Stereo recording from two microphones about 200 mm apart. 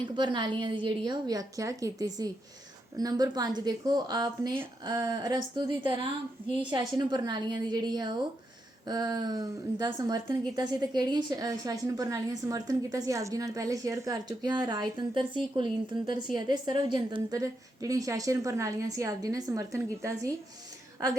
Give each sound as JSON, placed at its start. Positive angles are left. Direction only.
{"t": 0.0, "sound": "a woman's voice", "side_deg": -20}